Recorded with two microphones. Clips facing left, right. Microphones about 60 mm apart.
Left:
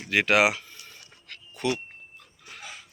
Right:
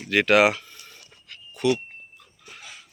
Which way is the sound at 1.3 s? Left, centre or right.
Left.